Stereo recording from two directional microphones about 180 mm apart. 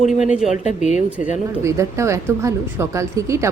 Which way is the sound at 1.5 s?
15° right (ahead or behind).